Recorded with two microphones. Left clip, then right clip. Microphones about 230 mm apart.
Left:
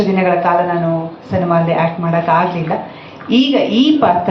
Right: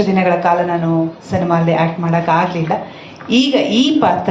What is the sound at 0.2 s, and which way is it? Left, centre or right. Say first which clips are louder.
A woman's voice: left 1 dB; right.